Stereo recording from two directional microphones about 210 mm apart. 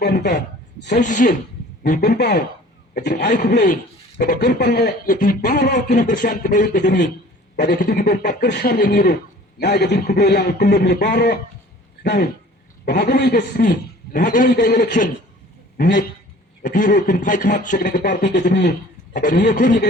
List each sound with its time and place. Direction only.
0.0 s a man's voice: 50° left (ahead or behind)
0.9 s a man's voice: 35° left (ahead or behind)
6.8 s a man's voice: 55° left (ahead or behind)
7.5 s a man's voice: 40° left (ahead or behind)
19.1 s a man's voice: 40° left (ahead or behind)